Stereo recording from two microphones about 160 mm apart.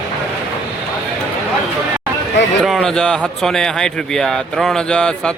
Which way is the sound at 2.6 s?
Centre (ahead or behind).